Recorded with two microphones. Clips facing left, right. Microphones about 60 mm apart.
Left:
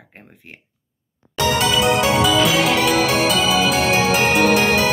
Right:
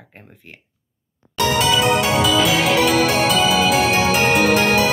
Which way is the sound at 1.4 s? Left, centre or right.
Centre.